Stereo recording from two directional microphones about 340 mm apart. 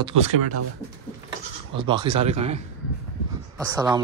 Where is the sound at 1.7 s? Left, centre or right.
Centre.